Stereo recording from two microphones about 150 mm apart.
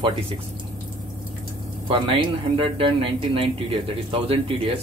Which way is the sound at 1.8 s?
35° right (ahead or behind).